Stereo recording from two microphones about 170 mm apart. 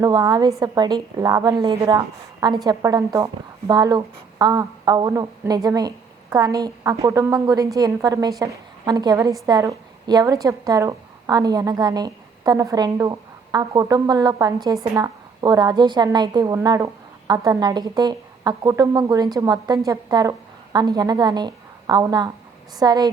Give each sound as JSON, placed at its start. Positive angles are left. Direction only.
{"t": 0.0, "sound": "a woman's voice", "side_deg": -25}